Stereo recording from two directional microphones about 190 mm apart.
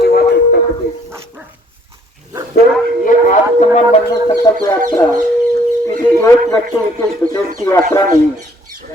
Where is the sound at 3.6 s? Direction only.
35° left (ahead or behind).